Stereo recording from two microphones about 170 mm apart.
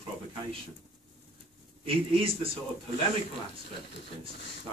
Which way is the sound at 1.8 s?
35° right (ahead or behind).